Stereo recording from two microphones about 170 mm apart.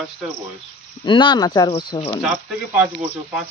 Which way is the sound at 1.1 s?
25° left (ahead or behind).